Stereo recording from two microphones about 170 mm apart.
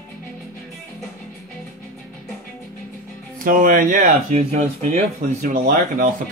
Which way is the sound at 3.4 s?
55° right (ahead or behind).